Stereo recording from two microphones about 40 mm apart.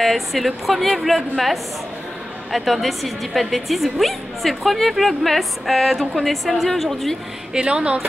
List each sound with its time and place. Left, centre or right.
0.0 s a woman's voice: centre
2.5 s a woman's voice: centre
7.5 s speech: right